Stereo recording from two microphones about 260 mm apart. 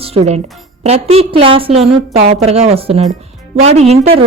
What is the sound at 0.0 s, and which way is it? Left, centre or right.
A woman's voice, right.